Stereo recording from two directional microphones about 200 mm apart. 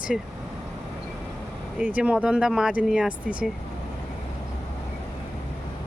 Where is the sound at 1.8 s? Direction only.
5° right (ahead or behind).